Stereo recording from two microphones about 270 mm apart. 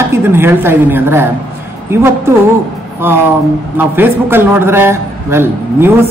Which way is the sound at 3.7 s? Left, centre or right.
Centre.